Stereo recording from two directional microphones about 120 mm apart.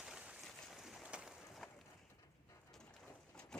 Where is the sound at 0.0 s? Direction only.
10° right (ahead or behind).